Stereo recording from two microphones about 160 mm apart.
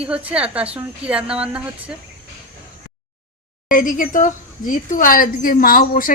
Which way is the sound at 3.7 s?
60° left (ahead or behind).